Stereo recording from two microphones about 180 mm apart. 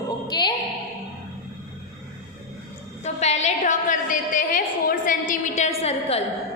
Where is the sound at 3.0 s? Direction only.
40° left (ahead or behind).